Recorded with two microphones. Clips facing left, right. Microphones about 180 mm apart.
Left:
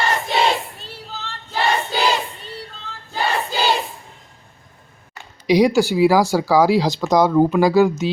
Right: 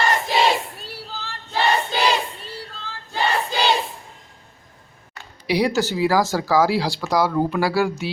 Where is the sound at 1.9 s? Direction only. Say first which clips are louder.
Left 1 dB; 5° left (ahead or behind).